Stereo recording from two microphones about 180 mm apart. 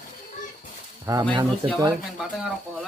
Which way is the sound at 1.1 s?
20° right (ahead or behind).